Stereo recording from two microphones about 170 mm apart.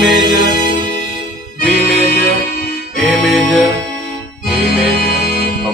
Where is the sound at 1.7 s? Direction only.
60° left (ahead or behind).